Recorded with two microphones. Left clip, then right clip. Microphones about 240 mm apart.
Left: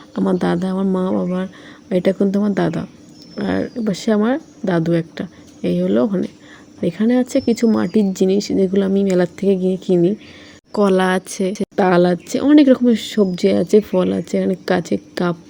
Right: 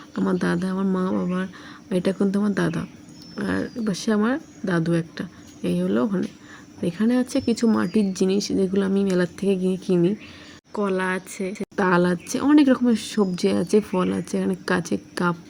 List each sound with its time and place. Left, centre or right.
0.1 s speech: centre
10.8 s a woman's voice: left
11.8 s speech: centre